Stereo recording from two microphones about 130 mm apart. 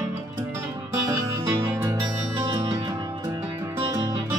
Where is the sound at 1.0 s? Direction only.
20° right (ahead or behind).